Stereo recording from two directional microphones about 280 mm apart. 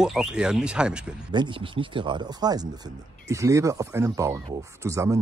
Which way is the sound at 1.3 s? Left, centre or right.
Centre.